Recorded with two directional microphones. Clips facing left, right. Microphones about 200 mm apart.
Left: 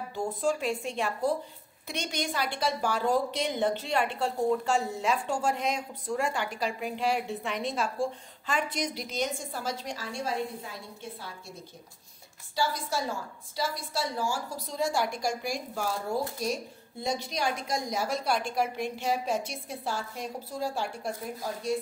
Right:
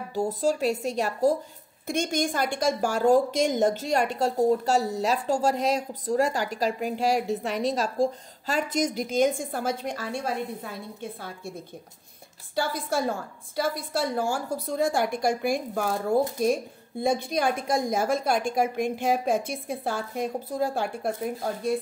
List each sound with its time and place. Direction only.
0.1 s a woman's voice: 40° right (ahead or behind)
12.5 s a woman's voice: 55° right (ahead or behind)